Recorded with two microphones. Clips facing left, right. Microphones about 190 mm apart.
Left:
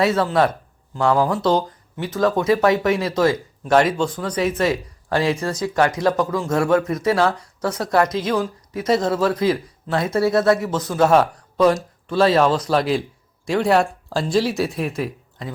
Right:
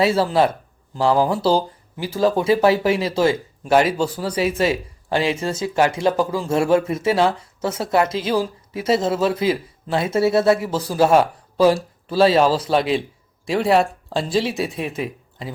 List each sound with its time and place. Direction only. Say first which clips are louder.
0.0 s speech: right 1 dB; 30° right (ahead or behind)
3.6 s speech: even; 5° right (ahead or behind)
4.2 s a man's voice: right 1 dB; 30° right (ahead or behind)
12.0 s speech: right 1 dB; 5° right (ahead or behind)